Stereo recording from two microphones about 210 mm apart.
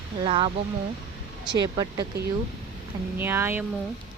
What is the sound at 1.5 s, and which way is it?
Speech, 20° right (ahead or behind).